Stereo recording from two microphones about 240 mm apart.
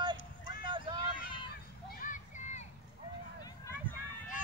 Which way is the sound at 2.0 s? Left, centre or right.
Left.